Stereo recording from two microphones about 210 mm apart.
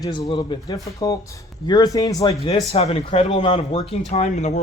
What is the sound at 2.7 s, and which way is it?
Speech, 30° left (ahead or behind).